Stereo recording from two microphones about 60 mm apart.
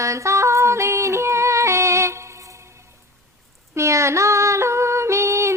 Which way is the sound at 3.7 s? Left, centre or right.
Right.